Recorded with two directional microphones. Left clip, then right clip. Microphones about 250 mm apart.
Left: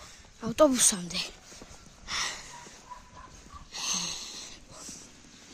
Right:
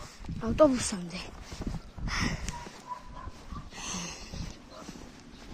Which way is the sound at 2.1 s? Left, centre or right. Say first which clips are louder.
Left 1 dB; centre.